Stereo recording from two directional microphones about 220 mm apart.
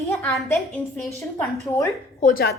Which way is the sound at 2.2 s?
45° left (ahead or behind).